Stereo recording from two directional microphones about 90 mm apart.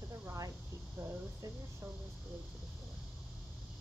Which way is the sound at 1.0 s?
30° right (ahead or behind).